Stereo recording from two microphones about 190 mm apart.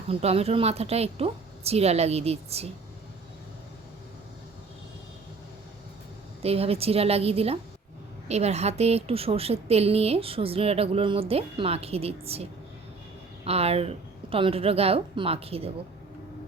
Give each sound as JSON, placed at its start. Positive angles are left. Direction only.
{"t": 0.1, "sound": "a woman's voice", "side_deg": -30}
{"t": 6.4, "sound": "a woman's voice", "side_deg": -30}